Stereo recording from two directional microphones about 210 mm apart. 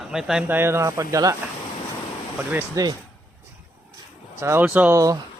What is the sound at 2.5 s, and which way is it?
Speech, 10° right (ahead or behind).